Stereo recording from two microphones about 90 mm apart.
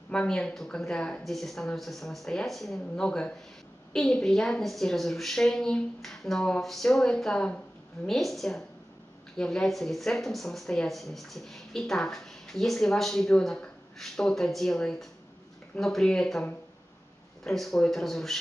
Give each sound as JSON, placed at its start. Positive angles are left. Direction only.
{"t": 0.1, "sound": "speech", "side_deg": 10}
{"t": 17.5, "sound": "speech", "side_deg": 5}